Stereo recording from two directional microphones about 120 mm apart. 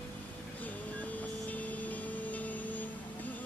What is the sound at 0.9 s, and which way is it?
Vehicle, 15° left (ahead or behind).